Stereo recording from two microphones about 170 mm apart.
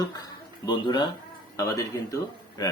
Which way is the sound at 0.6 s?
25° left (ahead or behind).